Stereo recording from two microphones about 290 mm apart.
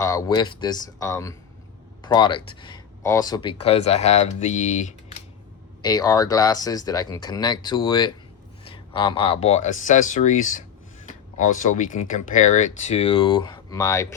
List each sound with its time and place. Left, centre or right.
0.0 s speech: centre
5.8 s speech: centre